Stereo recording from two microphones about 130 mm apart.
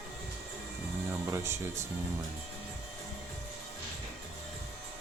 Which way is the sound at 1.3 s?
20° right (ahead or behind).